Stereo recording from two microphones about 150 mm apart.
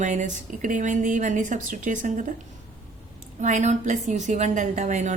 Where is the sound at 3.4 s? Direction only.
55° right (ahead or behind).